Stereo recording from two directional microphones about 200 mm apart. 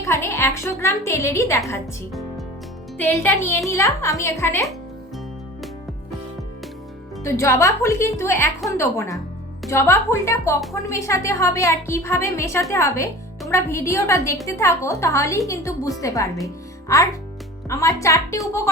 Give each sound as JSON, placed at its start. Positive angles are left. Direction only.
{"t": 0.0, "sound": "a woman's voice", "side_deg": 15}
{"t": 3.0, "sound": "a woman's voice", "side_deg": 10}
{"t": 7.3, "sound": "a woman's voice", "side_deg": 15}